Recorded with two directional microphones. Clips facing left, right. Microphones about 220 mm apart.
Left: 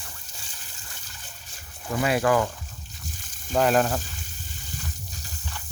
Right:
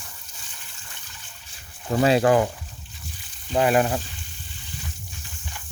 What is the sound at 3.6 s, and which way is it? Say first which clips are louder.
Speech: right 1 dB; 10° right (ahead or behind).